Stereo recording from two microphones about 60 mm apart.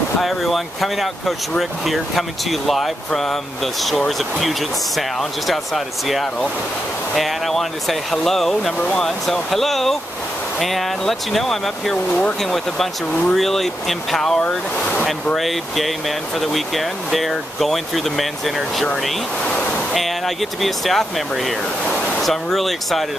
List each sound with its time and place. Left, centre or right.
0.2 s speech: centre
12.1 s speech: left
12.4 s speech: centre
14.8 s speech: centre
15.3 s speech: centre
19.4 s waves: centre
19.9 s speech: centre